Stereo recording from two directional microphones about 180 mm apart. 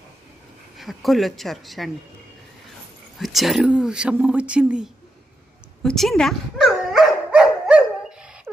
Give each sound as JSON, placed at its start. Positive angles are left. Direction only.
{"t": 0.7, "sound": "speech", "side_deg": 0}
{"t": 3.2, "sound": "speech", "side_deg": 0}
{"t": 5.8, "sound": "dog", "side_deg": 0}